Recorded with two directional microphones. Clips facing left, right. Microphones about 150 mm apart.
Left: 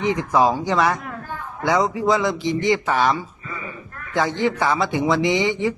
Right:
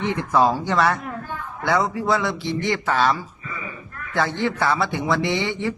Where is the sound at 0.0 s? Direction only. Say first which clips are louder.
Left 1 dB; 15° left (ahead or behind).